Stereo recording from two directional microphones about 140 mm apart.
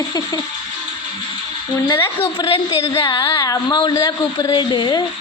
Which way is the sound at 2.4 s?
35° left (ahead or behind).